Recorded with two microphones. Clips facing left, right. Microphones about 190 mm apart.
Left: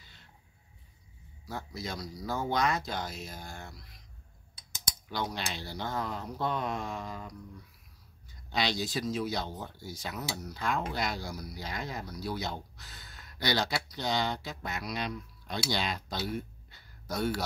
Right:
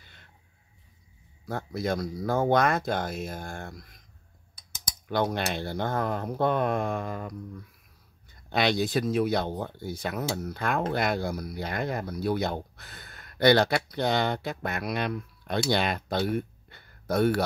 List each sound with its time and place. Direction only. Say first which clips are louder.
0.0 s a sound: right 2 dB; 55° right (ahead or behind)
1.4 s speech: right 8 dB; 55° right (ahead or behind)
5.0 s speech: right 8 dB; 55° right (ahead or behind)